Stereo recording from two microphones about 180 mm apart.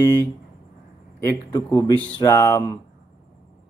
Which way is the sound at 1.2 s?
20° left (ahead or behind).